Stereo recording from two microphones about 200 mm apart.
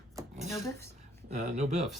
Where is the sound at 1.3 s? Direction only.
35° right (ahead or behind).